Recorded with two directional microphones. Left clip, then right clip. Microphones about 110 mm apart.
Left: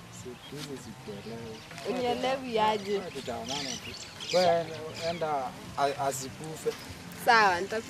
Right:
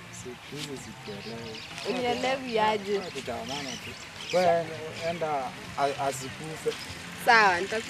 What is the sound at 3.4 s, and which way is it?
Speech, 20° left (ahead or behind).